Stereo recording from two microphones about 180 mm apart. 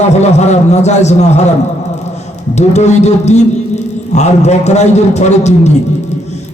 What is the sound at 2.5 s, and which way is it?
A man's voice, 40° left (ahead or behind).